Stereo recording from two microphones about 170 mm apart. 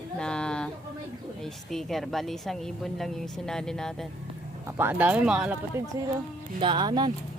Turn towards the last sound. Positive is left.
turn(degrees=-25)  # may be behind; listen again after turning